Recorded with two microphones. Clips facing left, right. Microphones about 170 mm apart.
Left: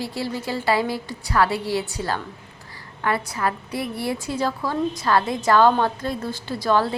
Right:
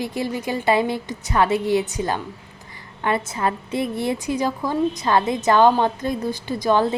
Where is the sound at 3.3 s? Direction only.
25° right (ahead or behind).